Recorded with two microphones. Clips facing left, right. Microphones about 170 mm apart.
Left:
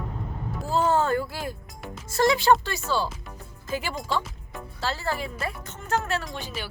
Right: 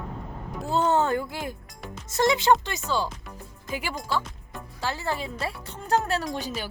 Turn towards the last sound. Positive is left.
turn(degrees=-40)  # may be behind; listen again after turning